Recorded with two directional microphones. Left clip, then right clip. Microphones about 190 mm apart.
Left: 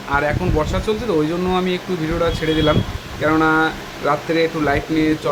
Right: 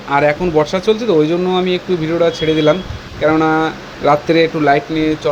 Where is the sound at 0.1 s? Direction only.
25° right (ahead or behind).